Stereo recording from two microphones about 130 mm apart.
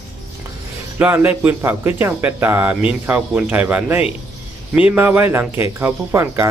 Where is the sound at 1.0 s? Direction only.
15° right (ahead or behind).